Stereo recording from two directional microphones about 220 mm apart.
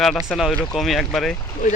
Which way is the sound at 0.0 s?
Centre (ahead or behind).